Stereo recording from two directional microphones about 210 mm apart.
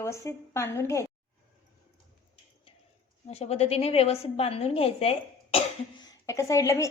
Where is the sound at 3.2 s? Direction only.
30° left (ahead or behind); by 6.9 s 15° left (ahead or behind).